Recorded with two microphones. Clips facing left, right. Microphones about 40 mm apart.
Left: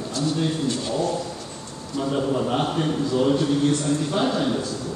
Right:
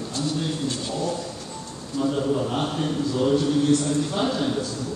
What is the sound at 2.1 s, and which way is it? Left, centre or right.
A man's voice, centre.